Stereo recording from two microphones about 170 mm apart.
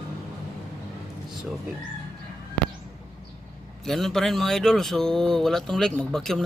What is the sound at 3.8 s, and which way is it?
Speech, centre (ahead or behind).